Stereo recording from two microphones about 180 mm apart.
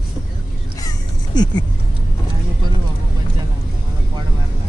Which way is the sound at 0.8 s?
25° left (ahead or behind).